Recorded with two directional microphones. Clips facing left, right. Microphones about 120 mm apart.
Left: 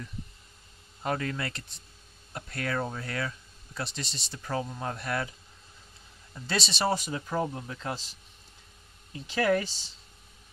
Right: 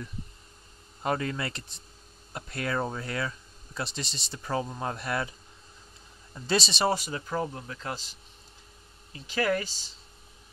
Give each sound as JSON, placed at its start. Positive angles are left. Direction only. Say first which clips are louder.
{"t": 1.0, "sound": "speech", "louder": "right 2 dB", "side_deg": -20}
{"t": 3.8, "sound": "speech", "louder": "right 1 dB", "side_deg": -30}
{"t": 4.5, "sound": "speech", "louder": "right 2 dB", "side_deg": -20}
{"t": 6.4, "sound": "speech", "louder": "right 4 dB", "side_deg": -30}
{"t": 7.1, "sound": "speech", "louder": "left 1 dB", "side_deg": 5}
{"t": 9.3, "sound": "speech", "louder": "left 2 dB", "side_deg": 0}